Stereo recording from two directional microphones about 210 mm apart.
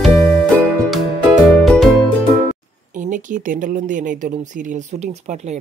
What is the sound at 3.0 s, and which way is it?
Speech, 40° right (ahead or behind).